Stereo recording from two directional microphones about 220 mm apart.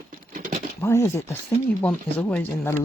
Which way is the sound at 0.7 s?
10° left (ahead or behind).